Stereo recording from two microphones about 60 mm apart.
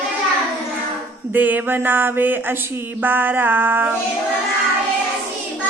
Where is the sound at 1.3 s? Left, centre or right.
Right.